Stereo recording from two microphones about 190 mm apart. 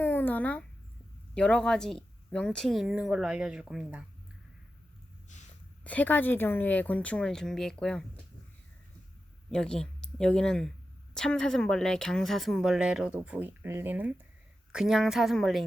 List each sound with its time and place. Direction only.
0.0 s a sound: 10° left (ahead or behind)
1.3 s a woman's voice: 5° left (ahead or behind)
5.8 s speech: 10° left (ahead or behind)
9.5 s a woman's voice: 5° left (ahead or behind)